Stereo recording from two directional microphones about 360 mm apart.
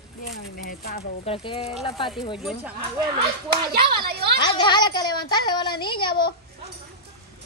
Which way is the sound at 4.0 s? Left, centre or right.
Right.